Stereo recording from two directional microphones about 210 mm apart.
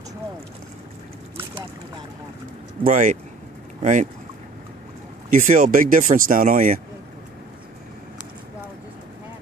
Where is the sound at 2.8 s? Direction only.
40° right (ahead or behind).